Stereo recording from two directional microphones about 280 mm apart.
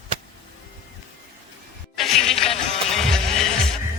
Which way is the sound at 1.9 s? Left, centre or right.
Centre.